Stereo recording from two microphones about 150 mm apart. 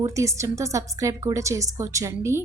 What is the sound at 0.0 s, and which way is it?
A woman's voice, 20° right (ahead or behind).